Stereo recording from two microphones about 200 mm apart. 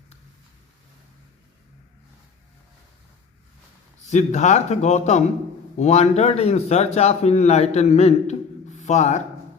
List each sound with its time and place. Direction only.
4.1 s a man's voice: 35° left (ahead or behind)